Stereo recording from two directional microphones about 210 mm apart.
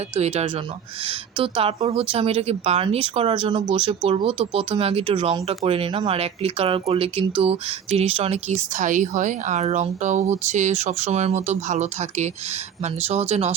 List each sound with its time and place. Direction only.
0.1 s speech: 30° right (ahead or behind)